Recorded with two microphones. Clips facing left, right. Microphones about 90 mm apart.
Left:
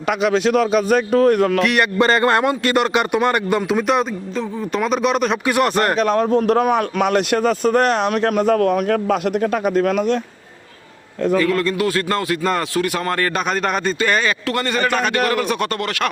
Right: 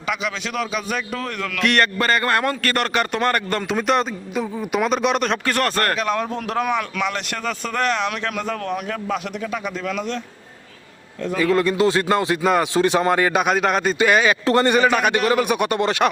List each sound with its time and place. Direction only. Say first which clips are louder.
0.1 s a man's voice: left 9 dB; 50° left (ahead or behind)
1.6 s speech: left 1 dB; 5° left (ahead or behind)
2.0 s a man's voice: left 5 dB; 25° left (ahead or behind)
3.7 s speech: left 2 dB; 5° left (ahead or behind)
6.0 s a man's voice: left 7 dB; 35° left (ahead or behind)
11.3 s a man's voice: right 2 dB; 20° right (ahead or behind)
12.7 s a man's voice: right 3 dB; 25° right (ahead or behind)
14.4 s a man's voice: right 5 dB; 25° right (ahead or behind)
14.8 s a man's voice: right 1 dB; 10° right (ahead or behind)